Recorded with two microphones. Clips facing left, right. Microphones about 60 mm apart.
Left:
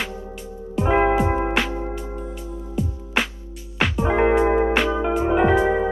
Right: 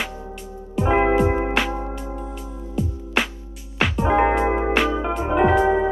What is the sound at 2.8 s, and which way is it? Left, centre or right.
Music, centre.